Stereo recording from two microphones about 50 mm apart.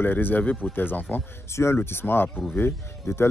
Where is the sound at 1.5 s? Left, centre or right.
Left.